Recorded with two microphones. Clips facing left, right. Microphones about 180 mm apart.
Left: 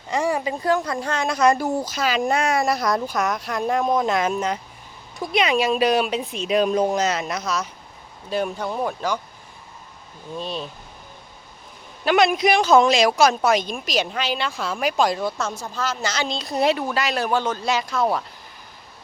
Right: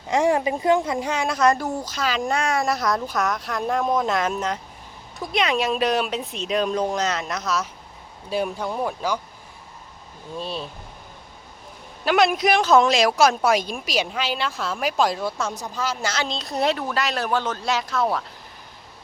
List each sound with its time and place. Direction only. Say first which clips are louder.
0.1 s speech: right 3 dB; 20° right (ahead or behind)
0.9 s a woman's voice: even; 10° right (ahead or behind)
1.3 s speech: left 2 dB; centre (ahead or behind)
10.3 s speech: left 1 dB; 5° right (ahead or behind)
12.0 s speech: left 1 dB; 5° right (ahead or behind)